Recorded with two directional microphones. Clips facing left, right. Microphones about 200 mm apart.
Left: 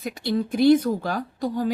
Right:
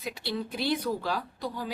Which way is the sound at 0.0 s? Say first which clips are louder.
Left 8 dB; 50° left (ahead or behind).